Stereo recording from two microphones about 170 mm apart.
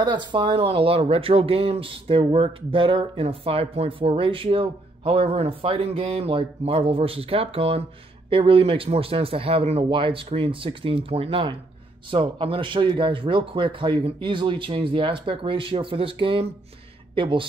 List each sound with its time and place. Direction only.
0.0 s speech: 25° right (ahead or behind)